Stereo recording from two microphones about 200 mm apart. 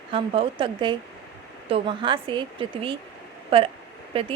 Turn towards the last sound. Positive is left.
turn(degrees=-30)  # may be behind; listen again after turning